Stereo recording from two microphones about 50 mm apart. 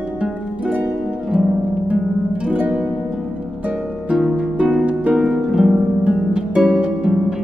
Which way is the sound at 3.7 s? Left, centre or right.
Centre.